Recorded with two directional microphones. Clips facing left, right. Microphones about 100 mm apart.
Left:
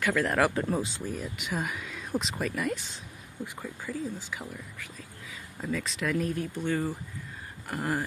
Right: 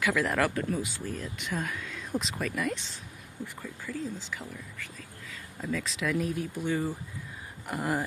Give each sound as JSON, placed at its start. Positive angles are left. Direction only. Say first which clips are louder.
{"t": 0.0, "sound": "speech", "louder": "left 1 dB", "side_deg": 0}
{"t": 0.6, "sound": "speech", "louder": "left 2 dB", "side_deg": 30}
{"t": 1.0, "sound": "speech", "louder": "left 1 dB", "side_deg": 10}
{"t": 3.8, "sound": "speech", "louder": "left 1 dB", "side_deg": 10}
{"t": 5.8, "sound": "speech", "louder": "even", "side_deg": 0}